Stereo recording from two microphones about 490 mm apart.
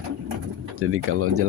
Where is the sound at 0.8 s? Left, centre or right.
Right.